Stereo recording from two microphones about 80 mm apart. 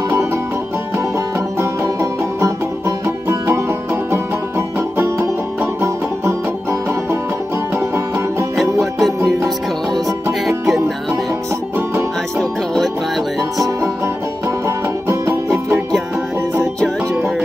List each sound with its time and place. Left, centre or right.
1.6 s music: right
8.5 s music: centre
10.6 s music: centre
12.4 s music: centre